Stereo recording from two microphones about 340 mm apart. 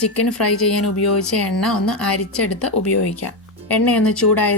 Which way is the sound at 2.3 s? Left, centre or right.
Left.